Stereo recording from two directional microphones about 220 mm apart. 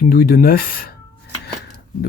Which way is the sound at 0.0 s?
40° left (ahead or behind).